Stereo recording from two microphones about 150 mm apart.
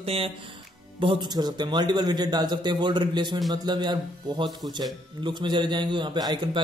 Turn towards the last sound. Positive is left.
turn(degrees=-30)  # may be behind; listen again after turning